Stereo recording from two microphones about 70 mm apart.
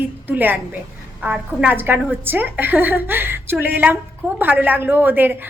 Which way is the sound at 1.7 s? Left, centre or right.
Right.